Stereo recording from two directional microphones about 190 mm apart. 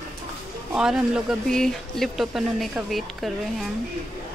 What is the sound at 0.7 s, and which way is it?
Speech, 5° right (ahead or behind).